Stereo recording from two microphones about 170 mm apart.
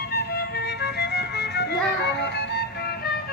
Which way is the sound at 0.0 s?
65° left (ahead or behind).